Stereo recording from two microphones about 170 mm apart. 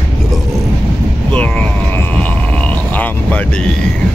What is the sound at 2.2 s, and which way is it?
Music, 10° left (ahead or behind).